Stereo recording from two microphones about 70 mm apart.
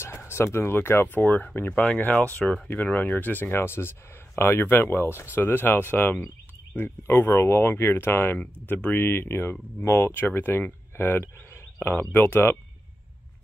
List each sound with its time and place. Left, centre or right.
0.0 s speech: left